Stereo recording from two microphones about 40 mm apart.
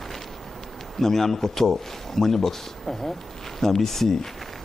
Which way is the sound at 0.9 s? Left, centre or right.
Centre.